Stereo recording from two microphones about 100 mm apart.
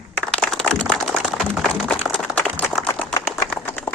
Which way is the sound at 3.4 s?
15° left (ahead or behind).